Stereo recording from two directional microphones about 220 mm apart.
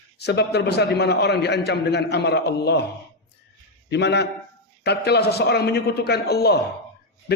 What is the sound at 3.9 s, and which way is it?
A man's voice, 50° left (ahead or behind).